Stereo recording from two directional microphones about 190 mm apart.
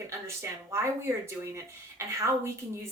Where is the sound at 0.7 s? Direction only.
15° right (ahead or behind).